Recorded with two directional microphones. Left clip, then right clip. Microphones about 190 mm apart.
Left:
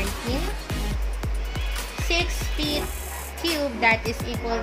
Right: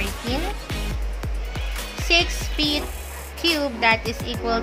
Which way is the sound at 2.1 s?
15° right (ahead or behind).